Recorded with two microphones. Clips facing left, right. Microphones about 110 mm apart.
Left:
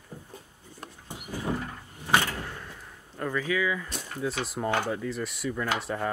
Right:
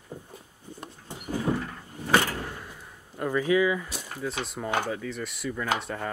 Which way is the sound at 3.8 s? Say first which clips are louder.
Even; 5° right (ahead or behind).